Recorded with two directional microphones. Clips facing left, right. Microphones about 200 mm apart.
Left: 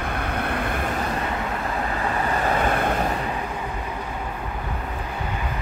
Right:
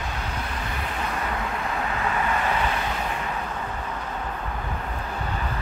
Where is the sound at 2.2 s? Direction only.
40° left (ahead or behind).